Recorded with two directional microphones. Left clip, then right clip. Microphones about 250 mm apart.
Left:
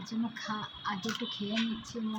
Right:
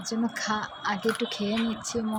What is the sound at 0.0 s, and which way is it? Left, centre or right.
Speech, centre.